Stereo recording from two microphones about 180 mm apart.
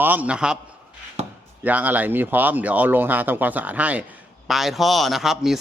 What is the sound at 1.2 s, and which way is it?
Chopping, 35° right (ahead or behind).